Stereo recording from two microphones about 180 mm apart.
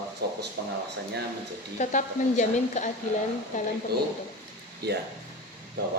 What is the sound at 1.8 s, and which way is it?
A woman's voice, 45° left (ahead or behind).